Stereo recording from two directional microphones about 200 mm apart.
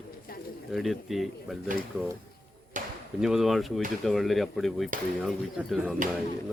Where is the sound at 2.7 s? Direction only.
40° right (ahead or behind).